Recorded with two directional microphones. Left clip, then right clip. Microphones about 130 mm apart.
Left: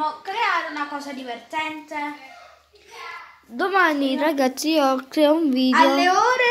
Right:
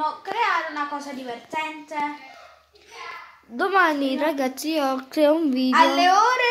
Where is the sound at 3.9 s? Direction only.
15° right (ahead or behind).